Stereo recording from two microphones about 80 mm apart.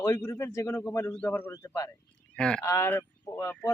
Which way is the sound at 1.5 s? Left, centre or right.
Left.